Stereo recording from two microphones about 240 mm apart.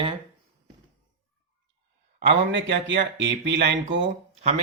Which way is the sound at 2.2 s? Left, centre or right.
Right.